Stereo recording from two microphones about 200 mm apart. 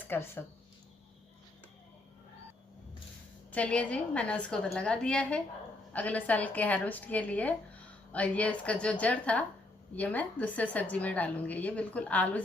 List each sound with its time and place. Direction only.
0.1 s a woman's voice: 10° left (ahead or behind)
3.5 s a woman's voice: 5° left (ahead or behind)